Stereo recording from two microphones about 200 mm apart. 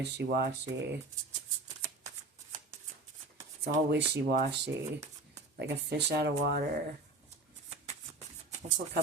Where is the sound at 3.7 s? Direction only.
60° right (ahead or behind).